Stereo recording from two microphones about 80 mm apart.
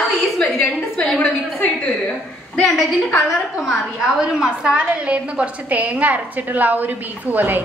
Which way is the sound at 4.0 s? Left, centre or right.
Centre.